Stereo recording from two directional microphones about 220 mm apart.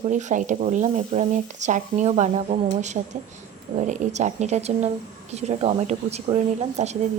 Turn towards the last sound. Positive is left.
turn(degrees=-25)  # may be behind; listen again after turning